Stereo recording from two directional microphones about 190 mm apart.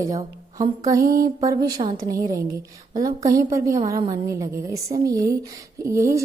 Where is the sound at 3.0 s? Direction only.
20° right (ahead or behind).